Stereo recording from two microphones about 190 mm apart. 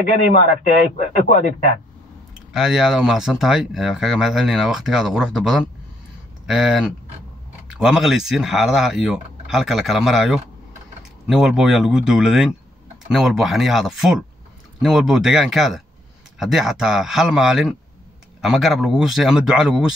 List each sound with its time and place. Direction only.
0.0 s a man's voice: 45° left (ahead or behind)
2.5 s speech: centre (ahead or behind)